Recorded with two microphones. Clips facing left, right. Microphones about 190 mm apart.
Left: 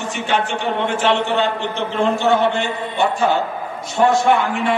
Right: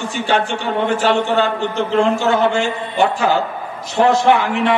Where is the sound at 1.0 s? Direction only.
40° right (ahead or behind).